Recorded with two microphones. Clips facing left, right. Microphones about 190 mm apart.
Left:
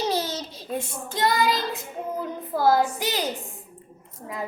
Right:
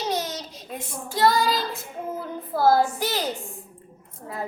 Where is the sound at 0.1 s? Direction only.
30° left (ahead or behind).